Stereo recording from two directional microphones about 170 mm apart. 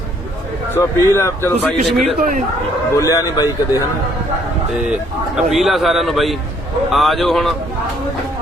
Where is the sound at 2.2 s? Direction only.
55° right (ahead or behind).